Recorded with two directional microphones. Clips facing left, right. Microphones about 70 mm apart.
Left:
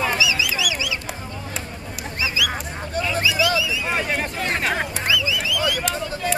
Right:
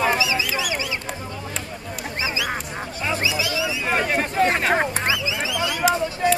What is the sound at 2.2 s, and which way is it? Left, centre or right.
Duck, right.